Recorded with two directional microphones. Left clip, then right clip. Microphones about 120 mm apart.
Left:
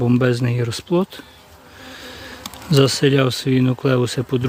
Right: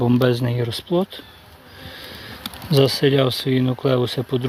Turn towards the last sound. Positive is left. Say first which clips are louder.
# left 1 dB
turn(degrees=60)  # may be behind; listen again after turning